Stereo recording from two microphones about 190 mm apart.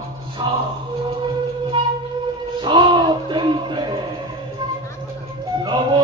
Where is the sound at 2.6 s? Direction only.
25° right (ahead or behind).